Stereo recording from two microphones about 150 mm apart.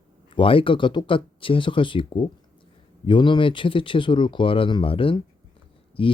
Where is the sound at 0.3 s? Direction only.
35° left (ahead or behind).